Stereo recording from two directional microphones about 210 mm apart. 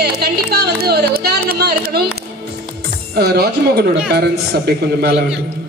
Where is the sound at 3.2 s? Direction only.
50° right (ahead or behind).